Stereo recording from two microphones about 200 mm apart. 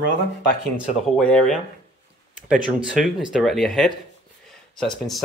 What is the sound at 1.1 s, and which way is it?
Speech, centre (ahead or behind).